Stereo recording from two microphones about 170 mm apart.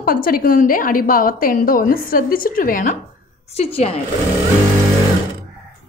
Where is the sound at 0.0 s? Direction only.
60° left (ahead or behind).